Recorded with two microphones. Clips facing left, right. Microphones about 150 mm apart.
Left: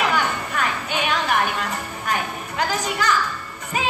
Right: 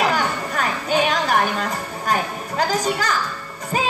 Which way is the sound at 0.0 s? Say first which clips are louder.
Right 1 dB; 35° right (ahead or behind).